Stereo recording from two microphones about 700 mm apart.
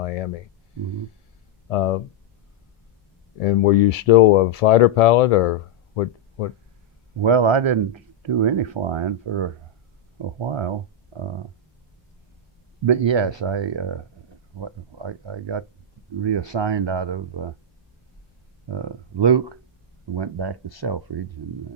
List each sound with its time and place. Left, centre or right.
0.0 s speech: left
1.7 s speech: left
3.4 s speech: left
7.2 s speech: right
12.8 s speech: right
18.7 s speech: right